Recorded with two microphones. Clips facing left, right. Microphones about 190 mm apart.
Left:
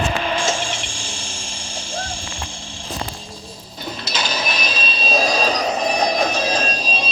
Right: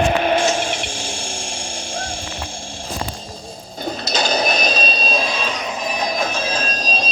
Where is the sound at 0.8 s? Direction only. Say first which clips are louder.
Right 5 dB; 60° right (ahead or behind).